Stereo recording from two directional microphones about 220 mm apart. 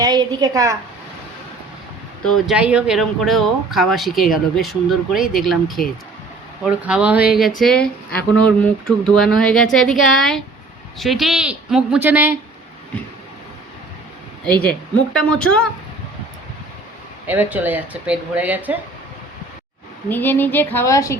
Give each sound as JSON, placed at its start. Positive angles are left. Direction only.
{"t": 0.0, "sound": "a woman's voice", "side_deg": -20}
{"t": 2.2, "sound": "speech", "side_deg": 0}
{"t": 14.6, "sound": "speech", "side_deg": 5}
{"t": 17.2, "sound": "speech", "side_deg": -10}
{"t": 20.1, "sound": "a woman's voice", "side_deg": 10}